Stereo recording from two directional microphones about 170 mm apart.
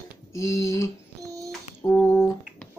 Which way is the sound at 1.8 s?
15° left (ahead or behind).